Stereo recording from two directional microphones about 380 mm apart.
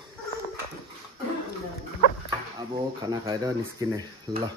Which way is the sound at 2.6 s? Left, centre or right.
Centre.